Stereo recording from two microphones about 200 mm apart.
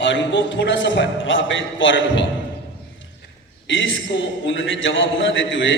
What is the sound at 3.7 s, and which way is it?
A man's voice, 70° left (ahead or behind).